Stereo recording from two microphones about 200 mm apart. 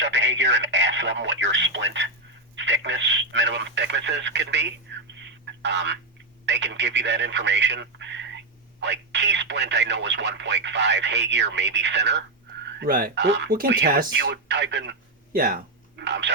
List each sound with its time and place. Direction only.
0.0 s speech: 65° right (ahead or behind)
5.2 s telephone: 60° right (ahead or behind)
6.4 s speech: 60° right (ahead or behind)
12.8 s speech: 50° right (ahead or behind)